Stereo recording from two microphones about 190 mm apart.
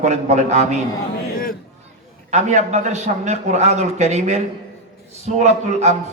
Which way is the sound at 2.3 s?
40° right (ahead or behind).